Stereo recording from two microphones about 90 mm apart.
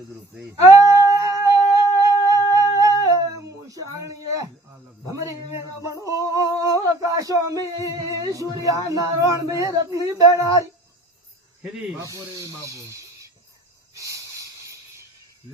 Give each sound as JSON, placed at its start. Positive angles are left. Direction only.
{"t": 0.7, "sound": "humming", "side_deg": -35}
{"t": 3.0, "sound": "a sound", "side_deg": -40}
{"t": 5.6, "sound": "music", "side_deg": -35}
{"t": 6.8, "sound": "a sound", "side_deg": -40}
{"t": 7.8, "sound": "speech", "side_deg": -40}
{"t": 11.6, "sound": "speech", "side_deg": -5}
{"t": 11.9, "sound": "speech", "side_deg": -35}
{"t": 13.9, "sound": "hiss", "side_deg": -40}